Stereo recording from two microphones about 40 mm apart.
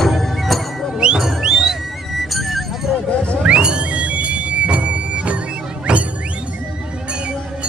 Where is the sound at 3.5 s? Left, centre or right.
Right.